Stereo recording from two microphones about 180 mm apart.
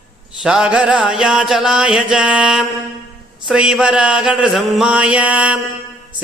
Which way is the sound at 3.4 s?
5° right (ahead or behind).